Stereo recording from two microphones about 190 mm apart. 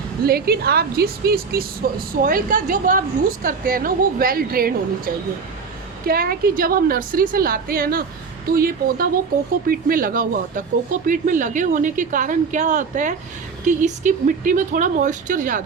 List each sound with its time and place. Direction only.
0.3 s a woman's voice: 55° right (ahead or behind)